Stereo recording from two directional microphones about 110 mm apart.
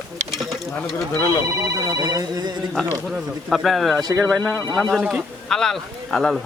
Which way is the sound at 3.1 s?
Centre (ahead or behind).